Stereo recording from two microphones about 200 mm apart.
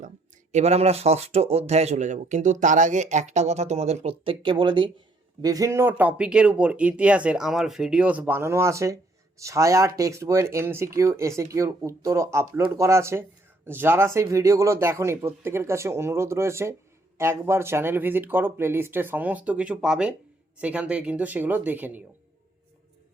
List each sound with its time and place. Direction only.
0.5 s speech: 30° right (ahead or behind); by 22.0 s 10° right (ahead or behind)